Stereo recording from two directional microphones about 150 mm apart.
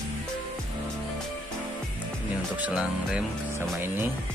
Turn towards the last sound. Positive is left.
turn(degrees=-15)  # may be behind; listen again after turning